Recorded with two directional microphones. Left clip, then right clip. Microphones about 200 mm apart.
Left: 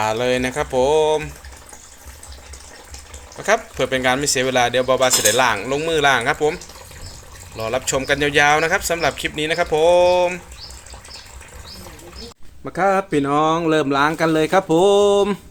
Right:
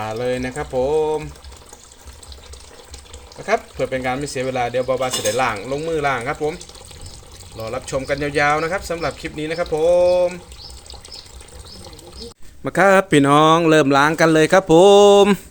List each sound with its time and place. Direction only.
0.0 s speech: centre (ahead or behind)
3.4 s speech: centre (ahead or behind)
7.6 s speech: centre (ahead or behind)
12.6 s a man's voice: 40° right (ahead or behind)